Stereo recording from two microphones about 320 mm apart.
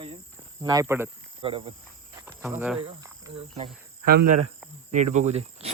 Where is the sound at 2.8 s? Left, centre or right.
Centre.